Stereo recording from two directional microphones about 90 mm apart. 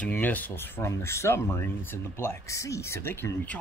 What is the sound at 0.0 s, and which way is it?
Speech, 20° left (ahead or behind).